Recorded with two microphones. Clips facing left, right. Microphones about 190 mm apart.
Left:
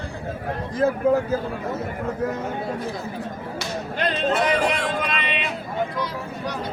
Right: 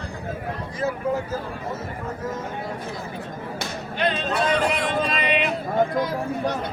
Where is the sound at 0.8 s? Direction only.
55° left (ahead or behind).